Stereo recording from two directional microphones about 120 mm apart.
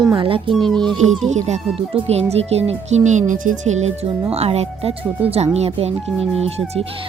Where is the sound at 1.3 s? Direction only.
75° right (ahead or behind).